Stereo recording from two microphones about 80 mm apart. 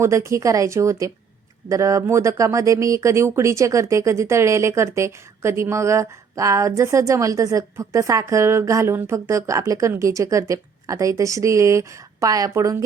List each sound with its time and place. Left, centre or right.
0.0 s speech: right